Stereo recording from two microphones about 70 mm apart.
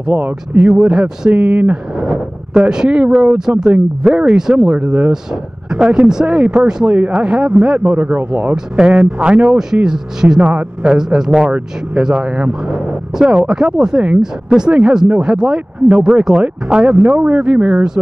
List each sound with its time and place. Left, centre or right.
0.0 s speech: centre
0.6 s a man's voice: centre; by 8.5 s right
8.7 s a man's voice: centre